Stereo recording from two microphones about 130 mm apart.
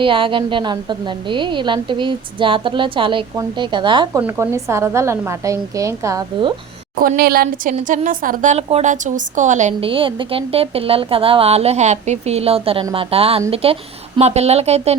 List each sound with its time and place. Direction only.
0.0 s a woman's voice: 40° right (ahead or behind)
4.2 s a woman's voice: 20° right (ahead or behind)
6.9 s a woman's voice: 90° right; by 9.7 s 70° right (ahead or behind)
9.8 s a woman's voice: 40° right (ahead or behind)